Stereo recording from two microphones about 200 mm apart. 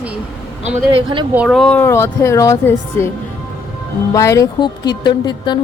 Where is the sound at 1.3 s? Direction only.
5° right (ahead or behind); by 3.1 s 15° left (ahead or behind).